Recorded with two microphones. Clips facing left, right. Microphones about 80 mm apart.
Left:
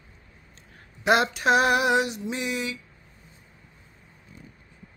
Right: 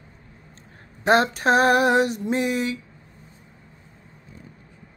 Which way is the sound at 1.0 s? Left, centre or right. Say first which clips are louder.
Right 3 dB; right.